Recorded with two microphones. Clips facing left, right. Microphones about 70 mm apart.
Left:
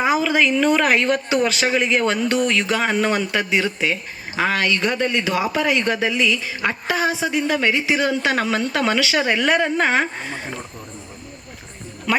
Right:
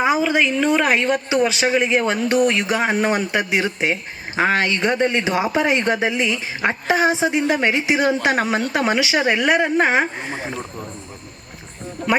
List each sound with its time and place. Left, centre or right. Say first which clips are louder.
0.2 s speech: even; centre
12.1 s speech: right 2 dB; right